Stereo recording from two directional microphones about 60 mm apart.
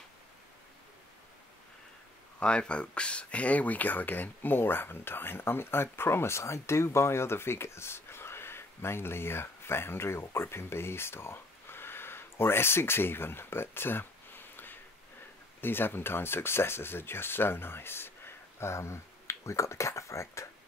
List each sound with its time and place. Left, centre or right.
2.4 s speech: centre; by 20.4 s left